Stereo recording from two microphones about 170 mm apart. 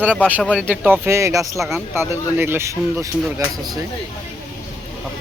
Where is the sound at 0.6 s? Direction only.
10° right (ahead or behind).